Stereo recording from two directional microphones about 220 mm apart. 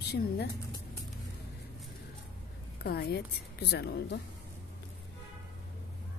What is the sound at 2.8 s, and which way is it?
Speech, 45° left (ahead or behind).